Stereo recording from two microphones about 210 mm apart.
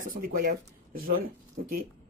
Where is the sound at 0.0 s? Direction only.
45° right (ahead or behind).